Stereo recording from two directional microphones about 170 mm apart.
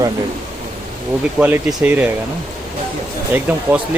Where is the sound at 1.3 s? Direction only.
5° right (ahead or behind).